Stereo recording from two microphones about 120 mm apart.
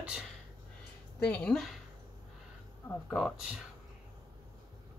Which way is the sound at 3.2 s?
Centre (ahead or behind).